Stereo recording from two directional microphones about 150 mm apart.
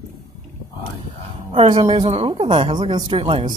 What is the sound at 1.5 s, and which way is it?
Speech, 35° right (ahead or behind).